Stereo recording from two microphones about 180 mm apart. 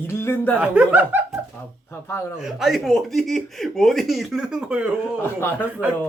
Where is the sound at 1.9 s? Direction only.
15° left (ahead or behind).